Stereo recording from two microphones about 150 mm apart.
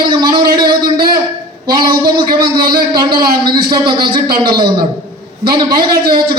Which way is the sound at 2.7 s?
30° right (ahead or behind).